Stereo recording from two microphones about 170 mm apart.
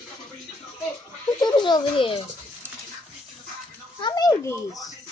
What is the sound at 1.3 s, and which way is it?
Speech, 25° left (ahead or behind).